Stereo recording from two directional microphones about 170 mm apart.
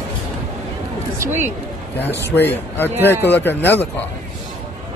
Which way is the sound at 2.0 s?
10° left (ahead or behind).